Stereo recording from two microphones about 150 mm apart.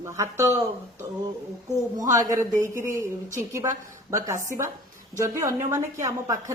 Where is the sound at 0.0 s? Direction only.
20° right (ahead or behind).